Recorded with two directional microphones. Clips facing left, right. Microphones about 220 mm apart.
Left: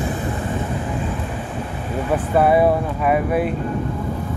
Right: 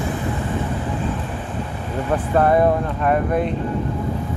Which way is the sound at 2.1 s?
5° left (ahead or behind).